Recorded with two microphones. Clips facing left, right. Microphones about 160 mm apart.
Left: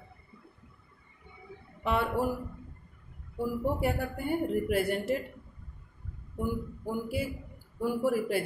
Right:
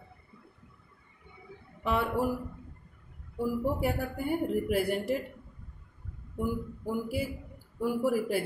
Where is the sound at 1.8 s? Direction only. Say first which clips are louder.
Even; 5° right (ahead or behind).